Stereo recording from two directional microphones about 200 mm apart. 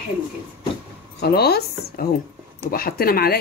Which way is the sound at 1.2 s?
55° left (ahead or behind).